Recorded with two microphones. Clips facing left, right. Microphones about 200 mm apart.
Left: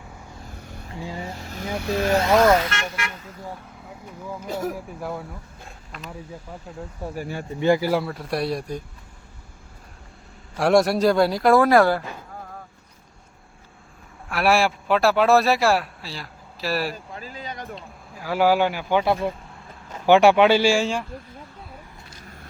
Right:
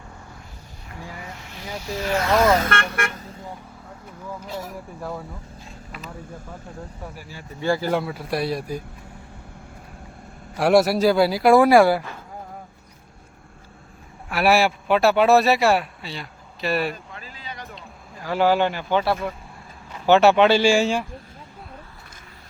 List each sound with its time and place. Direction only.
0.9 s vehicle: 25° left (ahead or behind)
1.7 s speech: 60° left (ahead or behind)
2.6 s vehicle: 55° right (ahead or behind)
3.8 s speech: 10° left (ahead or behind)
7.2 s speech: 55° left (ahead or behind)
7.6 s speech: 20° left (ahead or behind)
7.9 s speech: centre (ahead or behind)
10.6 s speech: 5° right (ahead or behind)
14.3 s speech: centre (ahead or behind)
17.2 s a sound: 45° left (ahead or behind)
17.7 s speech: 5° left (ahead or behind)